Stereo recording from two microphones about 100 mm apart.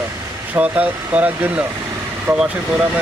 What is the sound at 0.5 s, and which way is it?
Speech, 15° right (ahead or behind).